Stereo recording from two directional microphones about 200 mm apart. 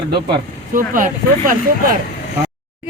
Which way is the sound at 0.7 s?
40° right (ahead or behind).